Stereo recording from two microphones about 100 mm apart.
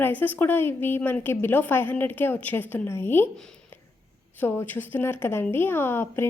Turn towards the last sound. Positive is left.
turn(degrees=25)  # may be behind; listen again after turning